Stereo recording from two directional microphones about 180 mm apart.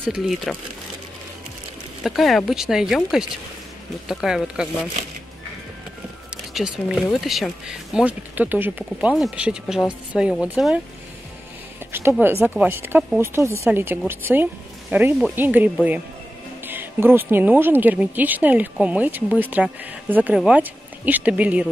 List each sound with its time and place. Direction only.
0.0 s speech: 5° right (ahead or behind)
2.0 s speech: centre (ahead or behind)
6.3 s speech: 5° right (ahead or behind)
11.9 s speech: 10° right (ahead or behind)